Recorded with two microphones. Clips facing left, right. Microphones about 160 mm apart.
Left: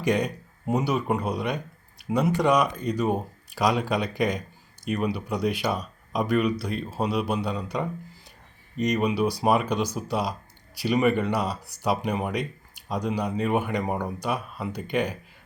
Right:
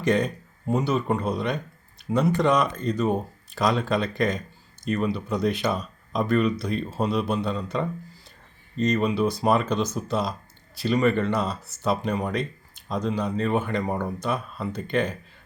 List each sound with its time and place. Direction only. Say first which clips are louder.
0.0 s speech: right 2 dB; 10° left (ahead or behind)